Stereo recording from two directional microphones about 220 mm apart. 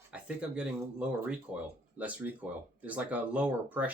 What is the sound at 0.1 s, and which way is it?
Speech, 5° right (ahead or behind).